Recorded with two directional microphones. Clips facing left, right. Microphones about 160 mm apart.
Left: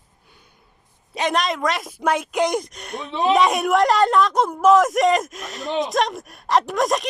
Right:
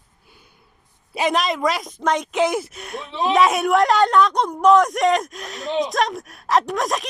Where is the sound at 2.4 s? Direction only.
5° right (ahead or behind).